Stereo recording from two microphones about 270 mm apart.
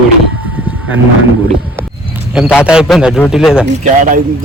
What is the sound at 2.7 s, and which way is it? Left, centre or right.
Speech, centre.